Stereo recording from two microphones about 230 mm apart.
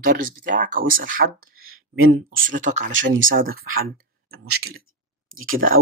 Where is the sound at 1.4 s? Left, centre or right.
Right.